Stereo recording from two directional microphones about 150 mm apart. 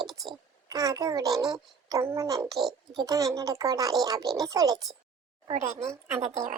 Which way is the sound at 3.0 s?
25° right (ahead or behind).